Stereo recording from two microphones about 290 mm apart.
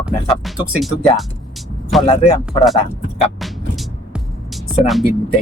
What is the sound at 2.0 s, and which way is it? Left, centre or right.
Speech, centre.